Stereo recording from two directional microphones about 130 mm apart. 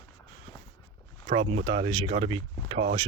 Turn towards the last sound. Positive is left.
turn(degrees=-45)  # may be behind; listen again after turning